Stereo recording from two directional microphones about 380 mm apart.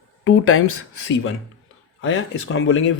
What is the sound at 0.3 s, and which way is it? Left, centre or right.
Speech, left.